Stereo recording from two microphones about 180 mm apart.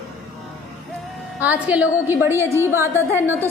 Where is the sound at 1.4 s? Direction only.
10° right (ahead or behind).